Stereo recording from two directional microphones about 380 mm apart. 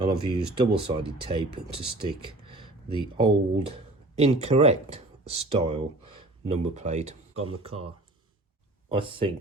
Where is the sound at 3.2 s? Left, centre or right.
Centre.